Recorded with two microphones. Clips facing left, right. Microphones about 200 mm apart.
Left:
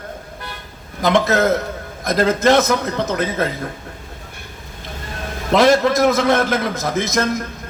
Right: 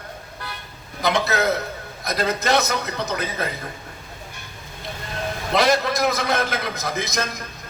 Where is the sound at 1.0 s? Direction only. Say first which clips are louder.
Left 6 dB; 50° left (ahead or behind).